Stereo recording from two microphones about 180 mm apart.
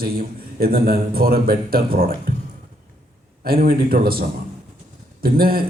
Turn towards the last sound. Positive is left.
turn(degrees=-55)  # may be behind; listen again after turning